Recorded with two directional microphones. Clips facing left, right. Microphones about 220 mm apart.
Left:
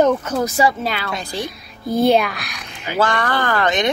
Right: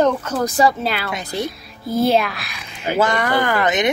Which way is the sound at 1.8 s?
5° right (ahead or behind).